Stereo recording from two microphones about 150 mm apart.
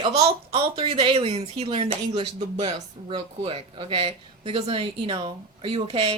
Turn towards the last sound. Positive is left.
turn(degrees=-40)  # may be behind; listen again after turning